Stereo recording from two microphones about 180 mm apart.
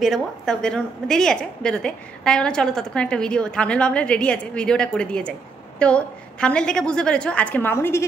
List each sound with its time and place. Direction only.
0.0 s a woman's voice: centre (ahead or behind)